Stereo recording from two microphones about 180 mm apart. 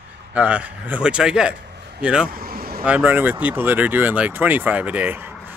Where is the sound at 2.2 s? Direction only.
55° right (ahead or behind).